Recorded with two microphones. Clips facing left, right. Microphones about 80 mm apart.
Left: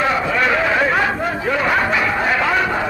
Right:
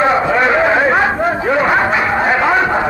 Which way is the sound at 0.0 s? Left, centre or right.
Right.